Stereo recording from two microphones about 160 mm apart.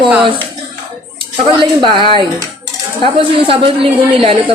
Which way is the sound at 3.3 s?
35° right (ahead or behind).